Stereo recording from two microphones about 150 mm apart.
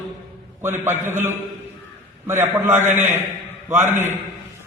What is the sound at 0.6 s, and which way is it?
A man's voice, 15° right (ahead or behind).